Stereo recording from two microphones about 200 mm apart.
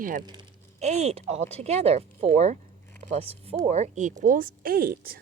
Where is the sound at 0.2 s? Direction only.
20° right (ahead or behind).